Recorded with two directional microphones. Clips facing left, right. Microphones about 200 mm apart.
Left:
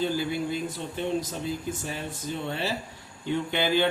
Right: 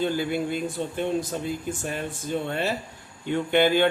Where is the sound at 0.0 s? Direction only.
55° right (ahead or behind).